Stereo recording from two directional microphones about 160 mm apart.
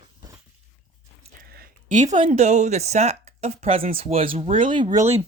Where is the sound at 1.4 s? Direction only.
70° right (ahead or behind).